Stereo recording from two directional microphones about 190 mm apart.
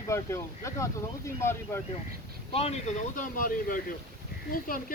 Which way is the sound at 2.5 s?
35° left (ahead or behind).